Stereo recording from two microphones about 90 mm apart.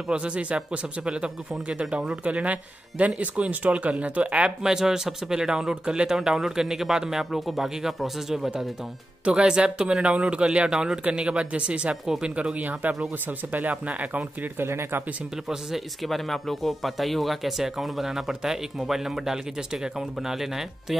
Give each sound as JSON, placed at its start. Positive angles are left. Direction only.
{"t": 0.1, "sound": "speech", "side_deg": -10}
{"t": 15.4, "sound": "speech", "side_deg": -5}